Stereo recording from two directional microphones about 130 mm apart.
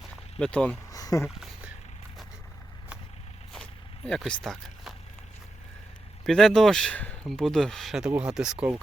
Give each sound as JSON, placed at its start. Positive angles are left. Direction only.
{"t": 0.3, "sound": "speech", "side_deg": 5}
{"t": 0.9, "sound": "a sound", "side_deg": 25}
{"t": 1.4, "sound": "a sound", "side_deg": -5}
{"t": 3.5, "sound": "vehicle", "side_deg": 5}
{"t": 4.3, "sound": "speech", "side_deg": 0}
{"t": 6.2, "sound": "speech", "side_deg": 5}